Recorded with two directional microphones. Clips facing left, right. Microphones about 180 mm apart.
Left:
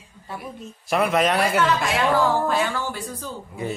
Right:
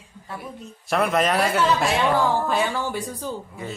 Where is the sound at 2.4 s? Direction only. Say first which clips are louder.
Even; 15° right (ahead or behind).